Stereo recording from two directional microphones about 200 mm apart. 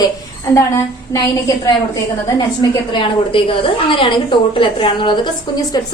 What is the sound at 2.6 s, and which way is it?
A woman's voice, 25° left (ahead or behind).